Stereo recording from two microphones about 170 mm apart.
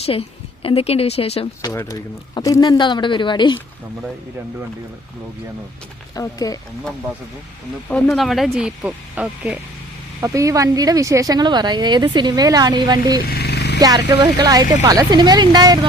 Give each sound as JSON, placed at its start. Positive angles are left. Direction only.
{"t": 0.0, "sound": "a woman's voice", "side_deg": 35}
{"t": 1.6, "sound": "speech", "side_deg": 20}
{"t": 6.1, "sound": "speech", "side_deg": 20}
{"t": 7.9, "sound": "speech", "side_deg": 5}
{"t": 10.2, "sound": "speech", "side_deg": -20}
{"t": 13.2, "sound": "vehicle", "side_deg": 65}
{"t": 13.7, "sound": "speech", "side_deg": -20}